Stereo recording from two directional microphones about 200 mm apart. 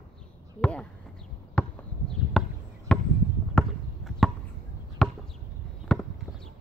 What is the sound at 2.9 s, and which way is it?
Chop, 5° left (ahead or behind).